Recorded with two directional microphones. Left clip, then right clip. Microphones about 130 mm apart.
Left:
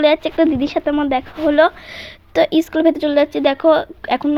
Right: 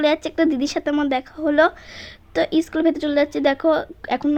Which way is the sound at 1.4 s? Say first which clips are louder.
Left 4 dB; 35° left (ahead or behind).